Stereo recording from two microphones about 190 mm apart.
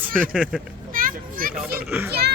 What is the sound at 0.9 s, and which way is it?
Children playing, 45° right (ahead or behind).